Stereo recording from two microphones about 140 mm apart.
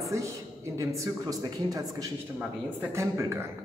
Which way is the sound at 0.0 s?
20° right (ahead or behind).